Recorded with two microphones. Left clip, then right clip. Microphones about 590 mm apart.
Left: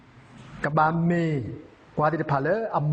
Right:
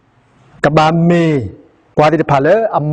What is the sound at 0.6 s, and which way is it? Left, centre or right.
A man's voice, right.